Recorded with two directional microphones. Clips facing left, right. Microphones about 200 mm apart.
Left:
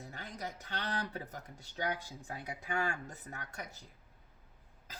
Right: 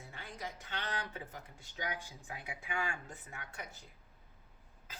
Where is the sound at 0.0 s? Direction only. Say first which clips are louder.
Left 2 dB; 40° left (ahead or behind).